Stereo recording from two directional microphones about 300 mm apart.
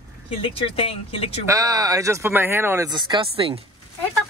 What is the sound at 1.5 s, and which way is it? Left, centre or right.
Speech, centre.